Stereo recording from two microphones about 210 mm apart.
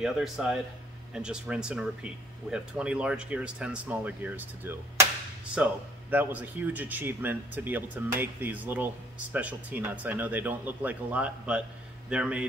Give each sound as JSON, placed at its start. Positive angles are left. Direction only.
{"t": 0.0, "sound": "speech", "side_deg": 0}